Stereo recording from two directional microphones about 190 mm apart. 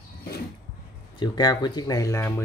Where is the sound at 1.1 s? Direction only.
20° left (ahead or behind).